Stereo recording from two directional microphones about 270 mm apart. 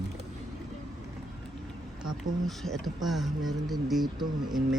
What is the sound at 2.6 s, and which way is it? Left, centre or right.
Speech, centre.